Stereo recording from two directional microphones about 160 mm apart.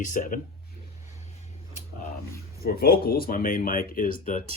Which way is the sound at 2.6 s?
75° left (ahead or behind).